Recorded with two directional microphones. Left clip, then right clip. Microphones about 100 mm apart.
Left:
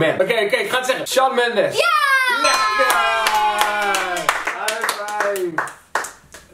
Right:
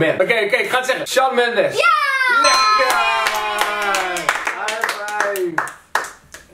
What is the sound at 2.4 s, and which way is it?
Clapping, centre (ahead or behind).